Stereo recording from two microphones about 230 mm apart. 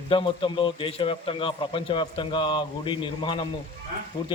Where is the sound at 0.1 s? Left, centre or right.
Left.